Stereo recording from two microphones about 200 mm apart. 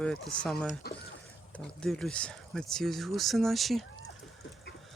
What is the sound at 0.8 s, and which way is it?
Speech, 50° left (ahead or behind).